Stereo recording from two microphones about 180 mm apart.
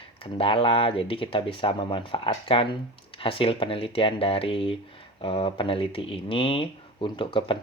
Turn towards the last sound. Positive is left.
turn(degrees=30)  # may be behind; listen again after turning